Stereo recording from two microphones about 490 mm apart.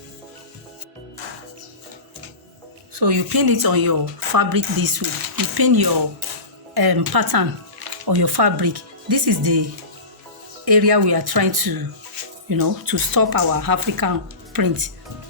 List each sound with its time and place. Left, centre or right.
2.9 s speech: right
10.7 s speech: right